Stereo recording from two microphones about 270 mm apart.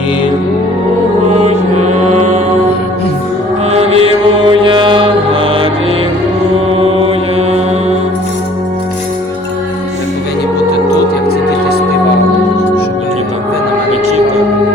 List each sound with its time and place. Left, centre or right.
1.4 s music: right
3.7 s mantra: right
6.7 s mantra: right
10.9 s music: left